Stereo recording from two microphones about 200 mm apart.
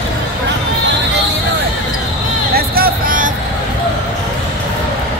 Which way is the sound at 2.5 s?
50° right (ahead or behind).